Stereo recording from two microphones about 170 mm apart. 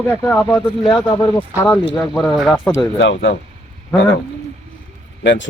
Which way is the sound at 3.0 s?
90° left.